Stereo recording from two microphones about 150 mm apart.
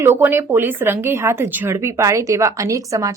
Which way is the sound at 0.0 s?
15° right (ahead or behind).